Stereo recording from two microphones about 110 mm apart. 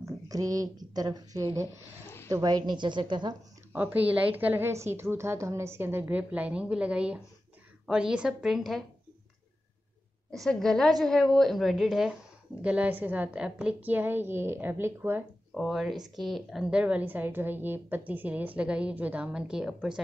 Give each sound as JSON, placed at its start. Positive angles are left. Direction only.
{"t": 0.0, "sound": "a woman's voice", "side_deg": -30}
{"t": 3.7, "sound": "a woman's voice", "side_deg": -15}
{"t": 10.3, "sound": "a woman's voice", "side_deg": 5}
{"t": 12.6, "sound": "a woman's voice", "side_deg": -15}
{"t": 15.5, "sound": "a woman's voice", "side_deg": 0}